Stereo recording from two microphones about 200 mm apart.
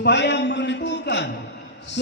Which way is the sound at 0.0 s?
60° left (ahead or behind).